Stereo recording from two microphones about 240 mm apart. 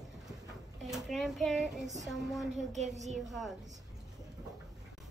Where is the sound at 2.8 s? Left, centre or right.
Right.